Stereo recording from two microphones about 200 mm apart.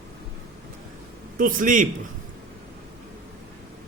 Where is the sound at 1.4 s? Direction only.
40° right (ahead or behind).